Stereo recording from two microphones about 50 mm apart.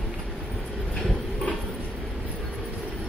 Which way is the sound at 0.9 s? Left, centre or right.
Centre.